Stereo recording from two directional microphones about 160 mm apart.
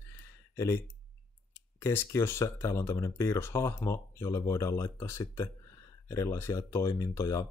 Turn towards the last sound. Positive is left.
turn(degrees=20)  # may be behind; listen again after turning